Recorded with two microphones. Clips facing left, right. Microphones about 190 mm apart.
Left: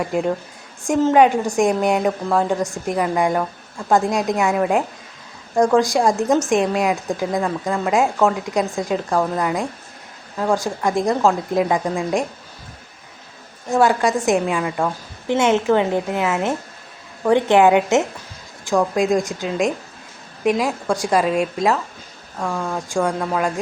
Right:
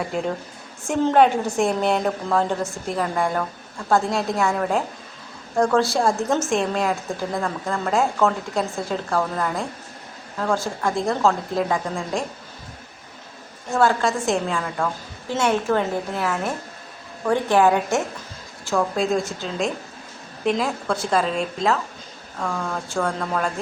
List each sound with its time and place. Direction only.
0.9 s a woman's voice: 10° left (ahead or behind)
13.7 s a woman's voice: 15° left (ahead or behind)